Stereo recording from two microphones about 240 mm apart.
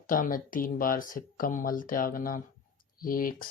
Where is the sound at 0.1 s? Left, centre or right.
Left.